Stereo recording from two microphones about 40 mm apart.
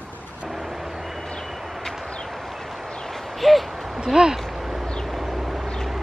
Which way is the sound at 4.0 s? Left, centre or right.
Centre.